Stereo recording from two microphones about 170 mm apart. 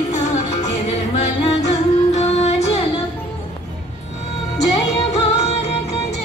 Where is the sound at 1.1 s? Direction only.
40° left (ahead or behind).